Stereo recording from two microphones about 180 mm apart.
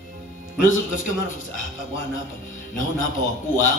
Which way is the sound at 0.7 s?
45° left (ahead or behind).